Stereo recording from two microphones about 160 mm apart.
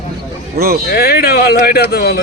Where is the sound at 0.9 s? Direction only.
80° left.